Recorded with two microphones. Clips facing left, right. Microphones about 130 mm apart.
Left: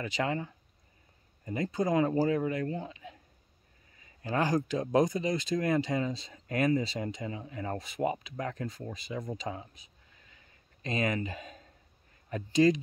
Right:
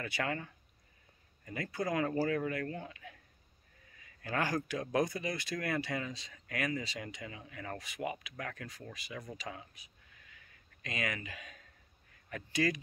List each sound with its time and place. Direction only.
0.0 s speech: 20° left (ahead or behind)
4.2 s speech: 20° left (ahead or behind)
10.3 s a sound: 30° left (ahead or behind)
12.3 s speech: 25° left (ahead or behind)